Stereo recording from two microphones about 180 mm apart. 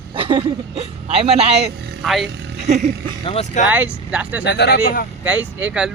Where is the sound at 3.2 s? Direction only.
35° left (ahead or behind).